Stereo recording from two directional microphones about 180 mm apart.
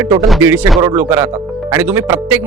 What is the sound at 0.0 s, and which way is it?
Speech, 20° right (ahead or behind).